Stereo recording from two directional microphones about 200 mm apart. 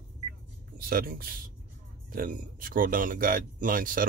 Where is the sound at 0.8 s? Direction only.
45° right (ahead or behind).